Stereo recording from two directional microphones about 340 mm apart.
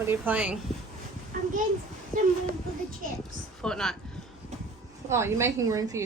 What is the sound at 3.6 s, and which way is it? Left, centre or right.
Speech, centre.